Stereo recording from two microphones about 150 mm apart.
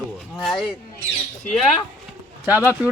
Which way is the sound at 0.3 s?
Centre (ahead or behind).